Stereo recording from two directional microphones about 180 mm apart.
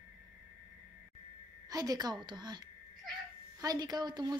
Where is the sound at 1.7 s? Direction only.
20° right (ahead or behind).